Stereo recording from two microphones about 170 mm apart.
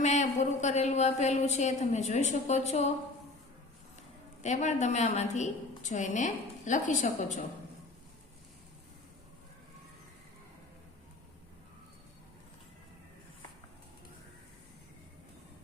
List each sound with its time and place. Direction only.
0.0 s a woman's voice: 45° left (ahead or behind)
4.4 s a woman's voice: 45° left (ahead or behind)